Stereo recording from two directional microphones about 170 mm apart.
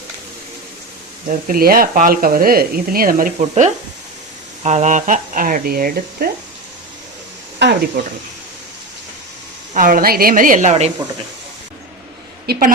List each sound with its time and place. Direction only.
1.3 s speech: 60° right (ahead or behind)
7.6 s speech: 85° right
9.7 s speech: 55° right (ahead or behind)
12.5 s speech: 60° right (ahead or behind)